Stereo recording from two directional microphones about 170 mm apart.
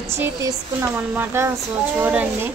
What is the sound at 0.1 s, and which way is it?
Speech, 15° right (ahead or behind).